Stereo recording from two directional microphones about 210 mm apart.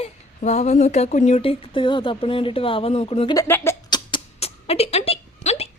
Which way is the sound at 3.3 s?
10° left (ahead or behind).